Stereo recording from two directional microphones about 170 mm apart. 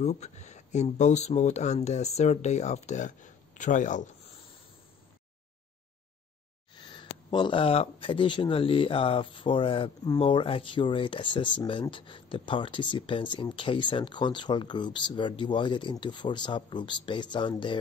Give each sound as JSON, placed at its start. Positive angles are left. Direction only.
{"t": 0.0, "sound": "speech", "side_deg": 40}
{"t": 6.7, "sound": "speech", "side_deg": 25}